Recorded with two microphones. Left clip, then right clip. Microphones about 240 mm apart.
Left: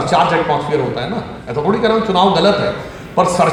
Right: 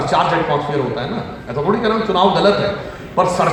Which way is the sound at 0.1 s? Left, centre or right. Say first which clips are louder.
Left 2 dB; left.